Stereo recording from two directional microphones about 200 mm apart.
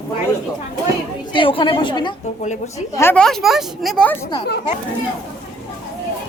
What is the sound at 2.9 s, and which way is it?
Speech, 10° left (ahead or behind).